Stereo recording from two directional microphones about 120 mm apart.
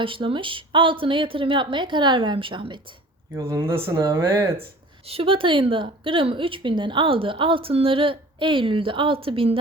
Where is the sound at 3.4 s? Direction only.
25° right (ahead or behind).